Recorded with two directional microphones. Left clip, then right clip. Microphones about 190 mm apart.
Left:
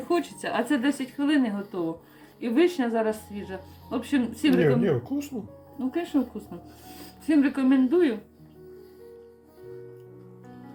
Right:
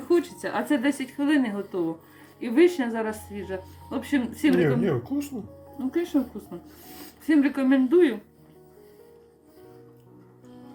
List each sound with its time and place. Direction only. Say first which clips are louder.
0.1 s a woman's voice: right 3 dB; 25° left (ahead or behind); by 8.1 s 10° left (ahead or behind)